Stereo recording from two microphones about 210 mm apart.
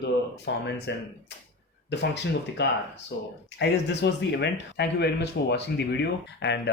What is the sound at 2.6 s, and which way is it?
Speech, 55° left (ahead or behind).